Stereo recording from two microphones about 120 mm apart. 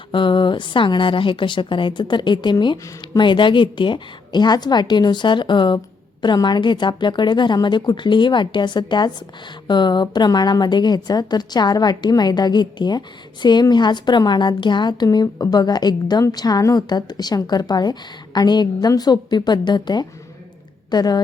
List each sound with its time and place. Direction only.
0.1 s a woman's voice: 45° left (ahead or behind)